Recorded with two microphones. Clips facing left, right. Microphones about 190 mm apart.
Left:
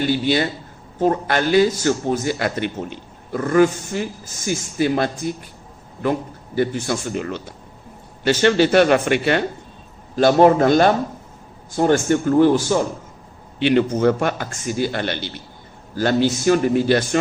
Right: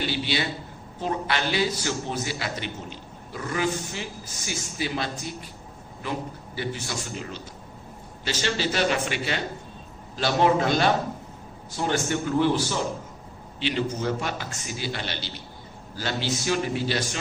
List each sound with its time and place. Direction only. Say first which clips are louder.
0.1 s a man's voice: left 9 dB; 50° left (ahead or behind)
6.6 s a man's voice: left 11 dB; 50° left (ahead or behind)
13.6 s a man's voice: left 11 dB; 60° left (ahead or behind)